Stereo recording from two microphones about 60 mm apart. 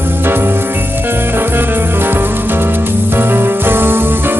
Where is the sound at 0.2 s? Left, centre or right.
Right.